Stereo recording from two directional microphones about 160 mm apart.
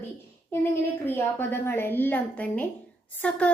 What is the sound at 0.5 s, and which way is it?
A woman's voice, 15° left (ahead or behind).